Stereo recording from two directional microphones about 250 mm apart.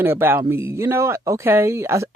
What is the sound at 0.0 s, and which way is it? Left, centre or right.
Speech, centre.